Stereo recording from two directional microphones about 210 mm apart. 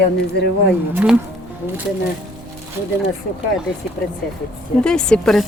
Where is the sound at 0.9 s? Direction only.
5° right (ahead or behind).